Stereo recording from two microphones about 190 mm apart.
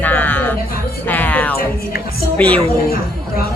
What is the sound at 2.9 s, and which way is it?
Chatter, 55° left (ahead or behind).